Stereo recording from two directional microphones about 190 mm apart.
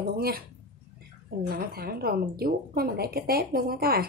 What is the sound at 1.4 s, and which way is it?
A woman's voice, 50° right (ahead or behind).